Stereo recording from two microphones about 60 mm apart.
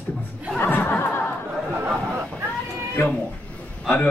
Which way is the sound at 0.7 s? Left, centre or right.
Left.